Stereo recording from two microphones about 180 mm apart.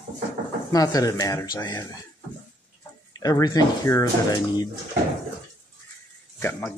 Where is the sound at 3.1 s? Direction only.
20° left (ahead or behind).